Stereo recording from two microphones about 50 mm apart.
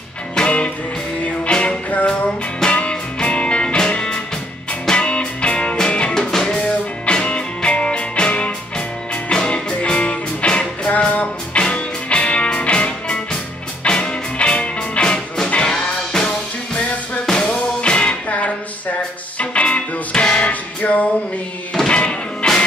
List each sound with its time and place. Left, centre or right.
0.4 s music: left